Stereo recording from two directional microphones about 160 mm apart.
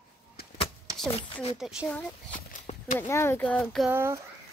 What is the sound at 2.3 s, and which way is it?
Horse, 55° left (ahead or behind).